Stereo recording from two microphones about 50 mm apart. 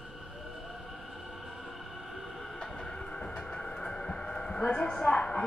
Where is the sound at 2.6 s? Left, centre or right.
Centre.